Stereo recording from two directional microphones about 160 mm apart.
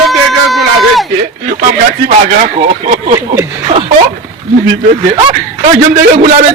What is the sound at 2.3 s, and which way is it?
Speech, 50° right (ahead or behind).